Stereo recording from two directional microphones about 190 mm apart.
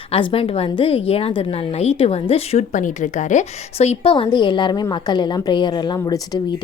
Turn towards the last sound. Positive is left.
turn(degrees=20)  # may be behind; listen again after turning